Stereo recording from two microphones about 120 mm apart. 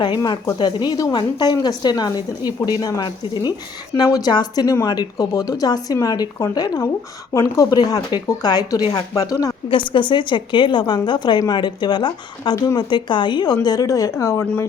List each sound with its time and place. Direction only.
0.2 s speech: 25° left (ahead or behind)
0.6 s a woman's voice: 35° left (ahead or behind)
9.9 s a woman's voice: 40° left (ahead or behind)
12.9 s a woman's voice: 40° left (ahead or behind); by 14.4 s 25° left (ahead or behind)